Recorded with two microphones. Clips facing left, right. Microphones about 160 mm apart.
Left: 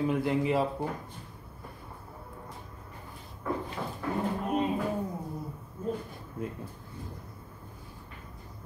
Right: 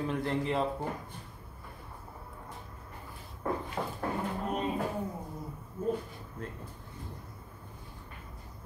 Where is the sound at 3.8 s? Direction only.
45° right (ahead or behind).